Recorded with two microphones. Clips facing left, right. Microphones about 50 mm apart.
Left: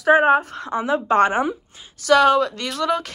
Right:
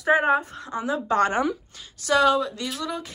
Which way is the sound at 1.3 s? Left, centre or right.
Left.